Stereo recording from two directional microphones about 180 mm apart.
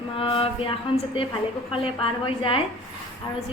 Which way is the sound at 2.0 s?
30° left (ahead or behind).